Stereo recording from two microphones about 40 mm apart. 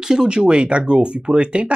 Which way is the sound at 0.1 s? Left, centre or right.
Right.